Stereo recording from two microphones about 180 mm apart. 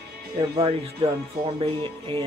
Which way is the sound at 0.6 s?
30° right (ahead or behind).